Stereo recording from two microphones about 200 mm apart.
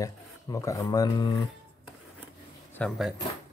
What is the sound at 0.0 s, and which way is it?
Speech, 15° left (ahead or behind).